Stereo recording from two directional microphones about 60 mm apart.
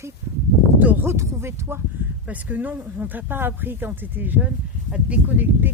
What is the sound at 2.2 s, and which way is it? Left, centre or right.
Speech, right.